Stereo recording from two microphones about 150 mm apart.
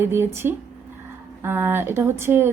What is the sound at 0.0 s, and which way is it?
Speech, 15° right (ahead or behind).